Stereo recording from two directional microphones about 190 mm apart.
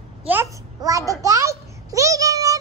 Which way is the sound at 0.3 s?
15° right (ahead or behind).